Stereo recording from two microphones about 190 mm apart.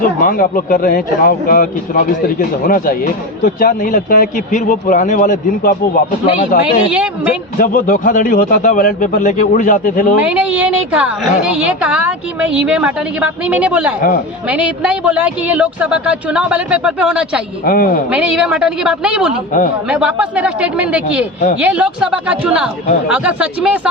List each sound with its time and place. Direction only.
0.2 s speech: 45° left (ahead or behind)
6.9 s a woman's voice: 5° right (ahead or behind)
7.6 s speech: 45° left (ahead or behind)
10.2 s a woman's voice: 5° right (ahead or behind)
17.7 s speech: 50° left (ahead or behind)
18.1 s a woman's voice: 5° right (ahead or behind)